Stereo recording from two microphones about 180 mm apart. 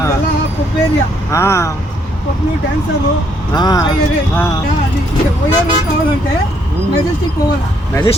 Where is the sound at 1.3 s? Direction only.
15° left (ahead or behind).